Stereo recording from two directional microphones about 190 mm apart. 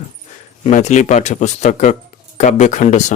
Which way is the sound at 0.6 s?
40° left (ahead or behind).